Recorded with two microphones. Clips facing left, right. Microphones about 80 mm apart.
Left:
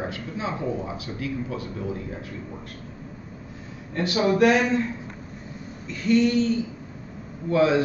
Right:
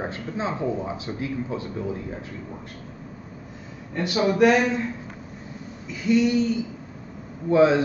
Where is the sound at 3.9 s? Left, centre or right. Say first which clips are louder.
Left 1 dB; centre.